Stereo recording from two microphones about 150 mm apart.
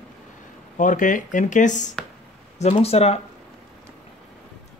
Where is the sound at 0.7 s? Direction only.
60° left (ahead or behind).